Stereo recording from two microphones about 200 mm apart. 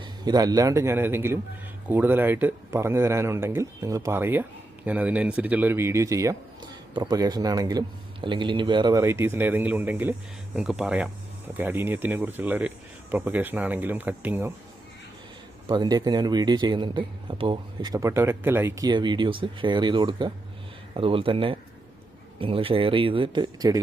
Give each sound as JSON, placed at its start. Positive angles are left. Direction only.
{"t": 0.0, "sound": "speech", "side_deg": -20}
{"t": 15.6, "sound": "a man's voice", "side_deg": -20}